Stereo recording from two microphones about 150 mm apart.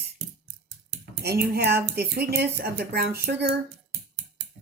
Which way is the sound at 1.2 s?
90° right.